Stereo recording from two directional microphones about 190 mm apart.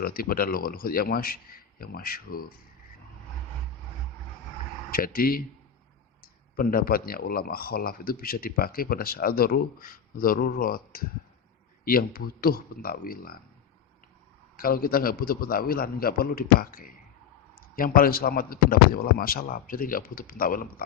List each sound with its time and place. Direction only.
0.0 s speech: 50° left (ahead or behind)
4.9 s speech: 50° left (ahead or behind)
6.6 s speech: 50° left (ahead or behind)
14.5 s speech: 50° left (ahead or behind)